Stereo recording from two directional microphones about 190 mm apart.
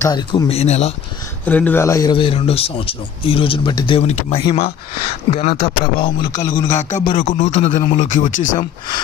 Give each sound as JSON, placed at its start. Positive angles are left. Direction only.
{"t": 0.0, "sound": "a man's voice", "side_deg": 20}
{"t": 0.5, "sound": "speech", "side_deg": 35}
{"t": 1.4, "sound": "a man's voice", "side_deg": 10}
{"t": 6.0, "sound": "a man's voice", "side_deg": 20}
{"t": 6.7, "sound": "speech", "side_deg": 40}